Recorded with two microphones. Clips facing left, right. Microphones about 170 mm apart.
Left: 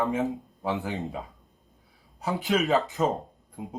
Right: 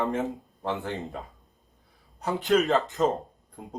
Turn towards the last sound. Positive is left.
turn(degrees=0)  # may be behind; listen again after turning